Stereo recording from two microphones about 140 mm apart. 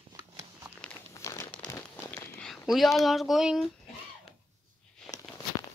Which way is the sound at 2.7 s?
Centre (ahead or behind).